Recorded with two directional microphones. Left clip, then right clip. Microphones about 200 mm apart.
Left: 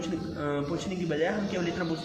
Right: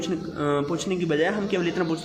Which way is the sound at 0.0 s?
50° right (ahead or behind).